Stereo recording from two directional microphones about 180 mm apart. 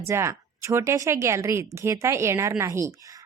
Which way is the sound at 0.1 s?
15° right (ahead or behind).